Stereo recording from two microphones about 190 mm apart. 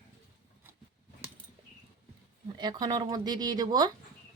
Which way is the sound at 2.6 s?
20° right (ahead or behind).